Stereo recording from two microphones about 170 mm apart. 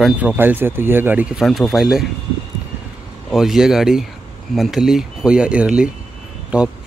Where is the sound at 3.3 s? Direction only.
Centre (ahead or behind).